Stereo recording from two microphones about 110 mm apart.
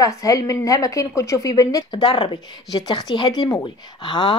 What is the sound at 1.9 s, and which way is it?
Speech, 45° left (ahead or behind).